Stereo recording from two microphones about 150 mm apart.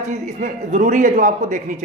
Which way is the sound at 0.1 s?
55° right (ahead or behind).